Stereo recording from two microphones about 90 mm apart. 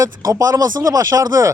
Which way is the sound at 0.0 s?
40° right (ahead or behind).